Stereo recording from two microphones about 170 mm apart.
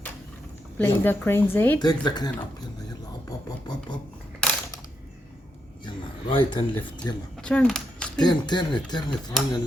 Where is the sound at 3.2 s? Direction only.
25° left (ahead or behind).